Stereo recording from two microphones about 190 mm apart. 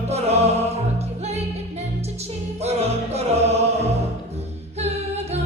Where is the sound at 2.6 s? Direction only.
35° right (ahead or behind).